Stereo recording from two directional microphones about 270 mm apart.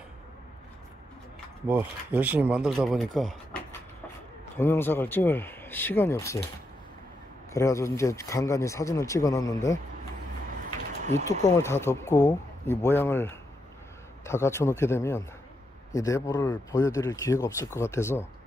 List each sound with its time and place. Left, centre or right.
1.7 s speech: centre
7.5 s speech: centre
11.0 s a sound: right
11.2 s speech: centre